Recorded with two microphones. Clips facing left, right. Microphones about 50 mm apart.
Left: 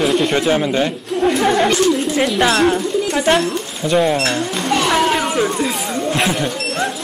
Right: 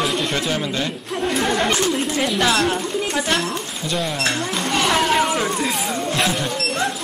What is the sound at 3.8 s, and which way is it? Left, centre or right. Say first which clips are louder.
Speech: left 8 dB; left.